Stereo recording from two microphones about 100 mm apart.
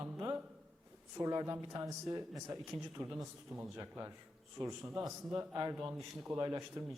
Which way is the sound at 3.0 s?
50° right (ahead or behind).